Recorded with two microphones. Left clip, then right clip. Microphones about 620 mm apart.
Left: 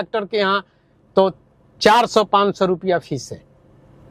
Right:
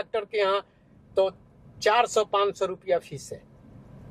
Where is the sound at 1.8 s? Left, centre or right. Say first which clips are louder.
Left 8 dB; left.